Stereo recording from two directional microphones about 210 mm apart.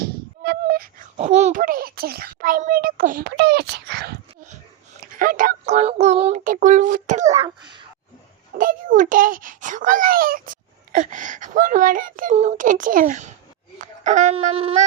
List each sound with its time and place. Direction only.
0.4 s a sound: 45° right (ahead or behind)
1.1 s a child's voice: 30° right (ahead or behind); by 4.4 s 50° right (ahead or behind)
5.1 s a child's voice: 40° right (ahead or behind)
7.4 s speech: 20° right (ahead or behind)
8.5 s a child's voice: 40° right (ahead or behind)